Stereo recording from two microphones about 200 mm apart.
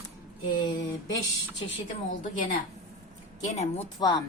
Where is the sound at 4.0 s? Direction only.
20° left (ahead or behind).